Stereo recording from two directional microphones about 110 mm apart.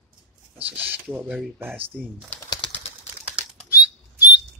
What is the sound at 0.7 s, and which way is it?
Speech, 15° right (ahead or behind).